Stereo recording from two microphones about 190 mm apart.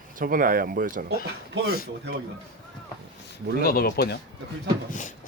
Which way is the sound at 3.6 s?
50° left (ahead or behind).